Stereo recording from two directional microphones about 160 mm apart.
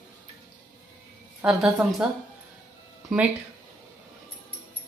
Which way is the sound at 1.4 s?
Centre (ahead or behind).